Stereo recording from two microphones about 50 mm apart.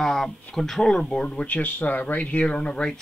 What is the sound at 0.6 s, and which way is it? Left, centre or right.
A man's voice, centre.